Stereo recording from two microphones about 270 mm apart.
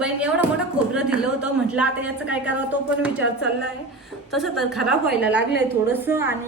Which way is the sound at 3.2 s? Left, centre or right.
Left.